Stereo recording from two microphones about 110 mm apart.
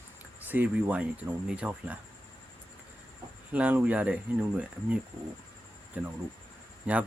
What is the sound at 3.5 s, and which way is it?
Speech, 15° right (ahead or behind).